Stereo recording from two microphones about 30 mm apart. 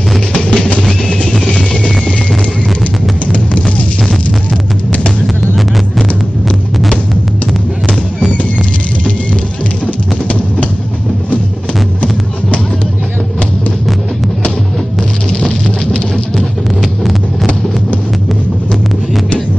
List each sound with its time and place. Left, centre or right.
0.3 s music: left
3.3 s music: left